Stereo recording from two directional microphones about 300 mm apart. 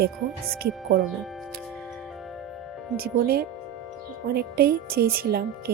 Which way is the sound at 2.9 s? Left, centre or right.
Right.